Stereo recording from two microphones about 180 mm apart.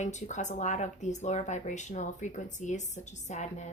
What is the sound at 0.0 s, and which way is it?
Speech, 40° left (ahead or behind).